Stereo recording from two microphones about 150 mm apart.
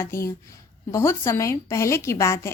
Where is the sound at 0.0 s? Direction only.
20° left (ahead or behind).